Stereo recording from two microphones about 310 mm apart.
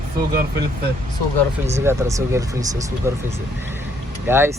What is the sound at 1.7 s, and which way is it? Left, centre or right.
Speech, centre.